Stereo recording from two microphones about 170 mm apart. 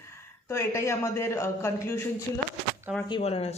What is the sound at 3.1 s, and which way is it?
Speech, 35° left (ahead or behind).